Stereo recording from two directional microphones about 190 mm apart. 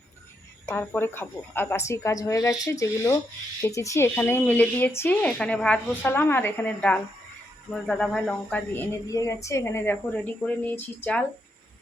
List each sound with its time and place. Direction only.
0.7 s a woman's voice: 10° left (ahead or behind)